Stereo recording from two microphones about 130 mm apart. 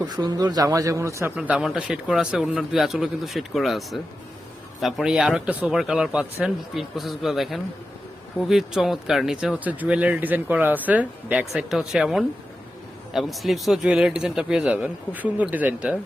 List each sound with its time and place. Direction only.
0.1 s a man's voice: 30° right (ahead or behind)
1.4 s speech: 10° right (ahead or behind)